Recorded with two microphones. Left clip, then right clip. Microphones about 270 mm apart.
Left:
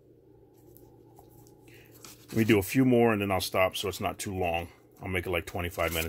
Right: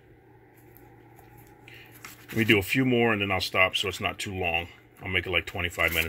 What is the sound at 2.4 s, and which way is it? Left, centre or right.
Speech, centre.